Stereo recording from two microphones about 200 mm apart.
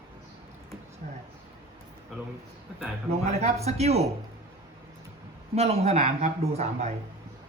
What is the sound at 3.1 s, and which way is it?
Speech, 35° right (ahead or behind).